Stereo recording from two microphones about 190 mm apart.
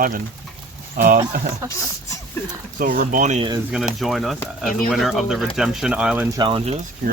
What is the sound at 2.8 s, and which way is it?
Speech, 45° right (ahead or behind).